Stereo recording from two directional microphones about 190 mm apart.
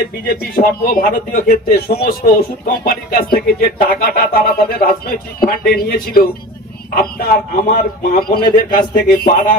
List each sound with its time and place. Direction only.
0.3 s speech: 50° left (ahead or behind)